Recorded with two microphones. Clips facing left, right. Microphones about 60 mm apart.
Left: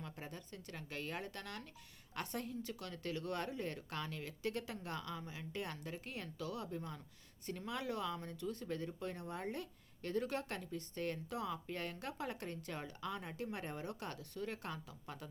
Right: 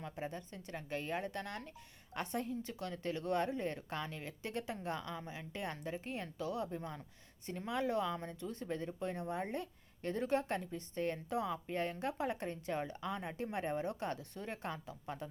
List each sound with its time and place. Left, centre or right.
0.0 s speech: right